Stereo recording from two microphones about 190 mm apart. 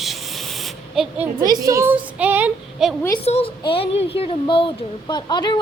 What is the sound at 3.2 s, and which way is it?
A woman's voice, 35° left (ahead or behind).